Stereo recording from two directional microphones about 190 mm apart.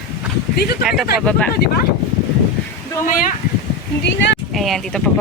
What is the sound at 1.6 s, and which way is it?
Speech, 55° left (ahead or behind).